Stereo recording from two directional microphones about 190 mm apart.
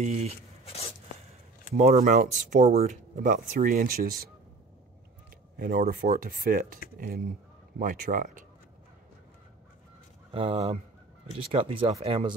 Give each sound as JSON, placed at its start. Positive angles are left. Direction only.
{"t": 0.0, "sound": "speech", "side_deg": -35}
{"t": 0.7, "sound": "a sound", "side_deg": 30}
{"t": 1.7, "sound": "speech", "side_deg": -35}
{"t": 5.6, "sound": "speech", "side_deg": -50}
{"t": 10.3, "sound": "speech", "side_deg": -30}